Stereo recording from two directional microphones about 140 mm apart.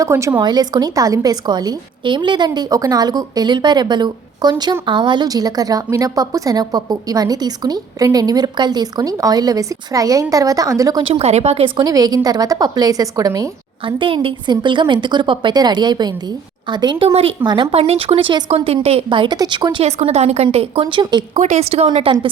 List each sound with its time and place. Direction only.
0.0 s a woman's voice: 20° right (ahead or behind)
11.1 s a woman's voice: 50° right (ahead or behind)
11.8 s a woman's voice: 25° right (ahead or behind)
13.8 s a woman's voice: 40° right (ahead or behind)
19.8 s a woman's voice: 50° right (ahead or behind); by 21.2 s 35° right (ahead or behind)
21.3 s a woman's voice: 55° right (ahead or behind)